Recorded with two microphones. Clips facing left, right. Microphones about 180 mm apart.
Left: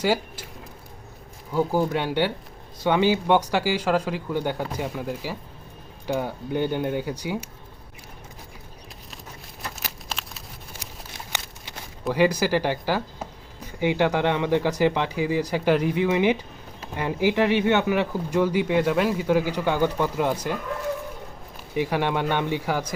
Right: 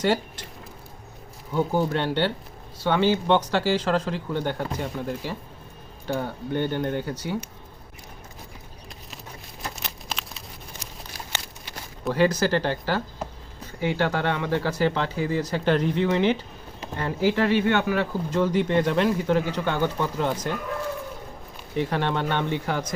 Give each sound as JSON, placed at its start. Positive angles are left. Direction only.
{"t": 0.0, "sound": "speech", "side_deg": 5}
{"t": 1.5, "sound": "speech", "side_deg": 5}
{"t": 9.6, "sound": "a sound", "side_deg": 0}
{"t": 11.1, "sound": "a sound", "side_deg": 20}
{"t": 12.1, "sound": "speech", "side_deg": 10}
{"t": 21.8, "sound": "speech", "side_deg": 10}